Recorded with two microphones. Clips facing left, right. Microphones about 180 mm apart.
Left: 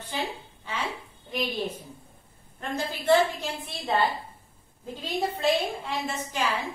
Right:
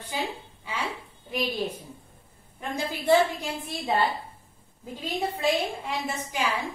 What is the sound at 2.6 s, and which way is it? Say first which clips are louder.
Speech: even; 15° right (ahead or behind).